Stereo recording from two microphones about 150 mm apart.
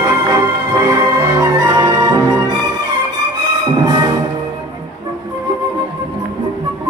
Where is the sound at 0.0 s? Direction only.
25° right (ahead or behind).